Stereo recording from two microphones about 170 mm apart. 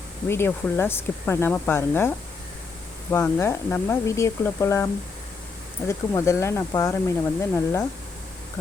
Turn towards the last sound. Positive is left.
turn(degrees=15)  # may be behind; listen again after turning